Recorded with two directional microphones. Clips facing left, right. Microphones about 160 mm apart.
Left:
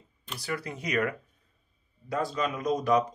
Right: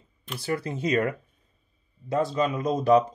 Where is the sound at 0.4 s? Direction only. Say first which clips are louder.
Right 6 dB; 25° right (ahead or behind).